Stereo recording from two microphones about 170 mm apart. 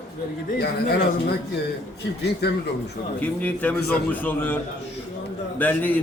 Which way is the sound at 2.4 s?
75° left (ahead or behind).